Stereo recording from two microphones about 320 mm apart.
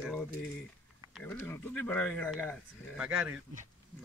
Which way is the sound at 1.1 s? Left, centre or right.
Centre.